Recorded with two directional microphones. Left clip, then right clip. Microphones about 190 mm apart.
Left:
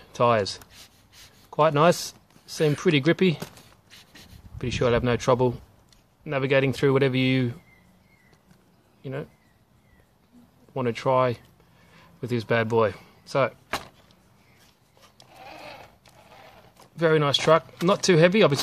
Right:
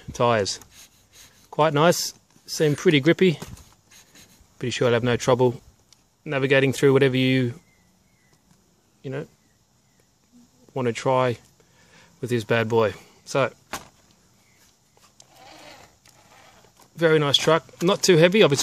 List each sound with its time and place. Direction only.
0.0 s speech: 35° right (ahead or behind)
4.6 s speech: 35° right (ahead or behind)
9.0 s speech: 40° right (ahead or behind)
10.7 s speech: 40° right (ahead or behind)
15.3 s sheep: 5° right (ahead or behind)
16.9 s speech: 40° right (ahead or behind)